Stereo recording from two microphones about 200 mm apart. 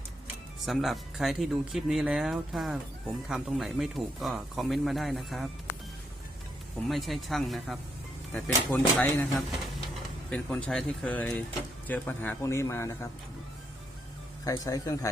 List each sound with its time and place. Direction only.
0.6 s speech: centre (ahead or behind)
6.8 s speech: centre (ahead or behind)
10.2 s speech: 5° left (ahead or behind)
14.4 s speech: 15° left (ahead or behind)